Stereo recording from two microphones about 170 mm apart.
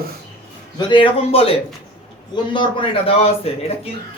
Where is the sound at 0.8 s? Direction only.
30° left (ahead or behind).